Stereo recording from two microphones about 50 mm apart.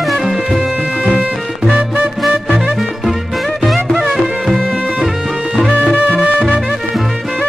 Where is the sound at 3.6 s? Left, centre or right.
Centre.